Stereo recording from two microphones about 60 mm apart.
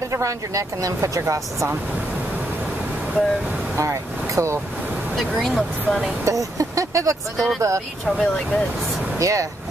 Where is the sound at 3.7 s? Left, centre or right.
Right.